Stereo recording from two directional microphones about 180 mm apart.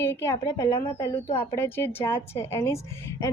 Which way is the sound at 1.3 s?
30° left (ahead or behind).